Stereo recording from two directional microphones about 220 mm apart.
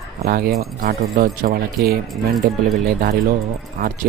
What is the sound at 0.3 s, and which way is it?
Speech, 45° right (ahead or behind).